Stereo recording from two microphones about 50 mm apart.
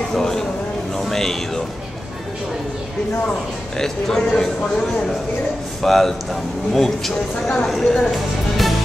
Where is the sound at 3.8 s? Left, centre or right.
Centre.